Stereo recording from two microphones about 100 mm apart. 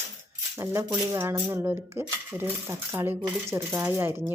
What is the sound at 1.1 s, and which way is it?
Speech, 25° right (ahead or behind).